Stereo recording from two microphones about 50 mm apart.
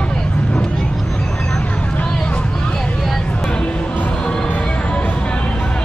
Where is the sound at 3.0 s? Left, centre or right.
Centre.